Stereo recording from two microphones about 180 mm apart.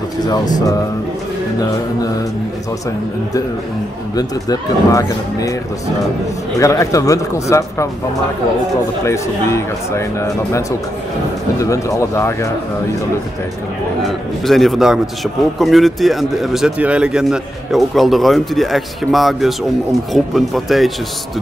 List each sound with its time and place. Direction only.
0.2 s speech: 20° left (ahead or behind)
4.1 s speech: 20° left (ahead or behind)
6.6 s speech: 20° left (ahead or behind)
9.0 s speech: 15° left (ahead or behind)
14.0 s speech: centre (ahead or behind)